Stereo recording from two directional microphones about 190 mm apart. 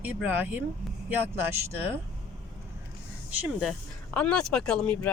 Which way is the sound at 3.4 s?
5° right (ahead or behind).